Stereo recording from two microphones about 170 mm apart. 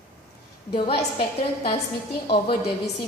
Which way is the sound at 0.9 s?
65° left (ahead or behind).